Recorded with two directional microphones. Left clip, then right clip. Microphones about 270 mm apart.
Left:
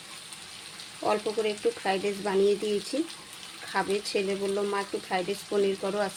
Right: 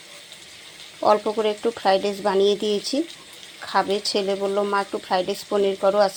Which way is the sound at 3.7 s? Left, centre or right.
Centre.